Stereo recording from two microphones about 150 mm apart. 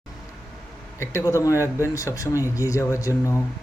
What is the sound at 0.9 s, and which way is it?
Speech, 20° left (ahead or behind).